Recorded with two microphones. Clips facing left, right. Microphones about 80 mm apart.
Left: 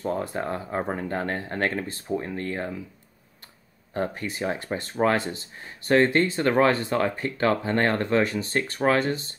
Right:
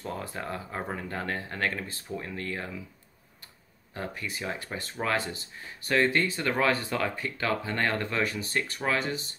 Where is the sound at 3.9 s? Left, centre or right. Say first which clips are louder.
Left 7 dB; left.